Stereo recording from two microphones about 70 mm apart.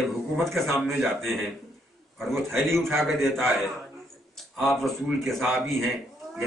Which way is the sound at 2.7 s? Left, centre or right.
Right.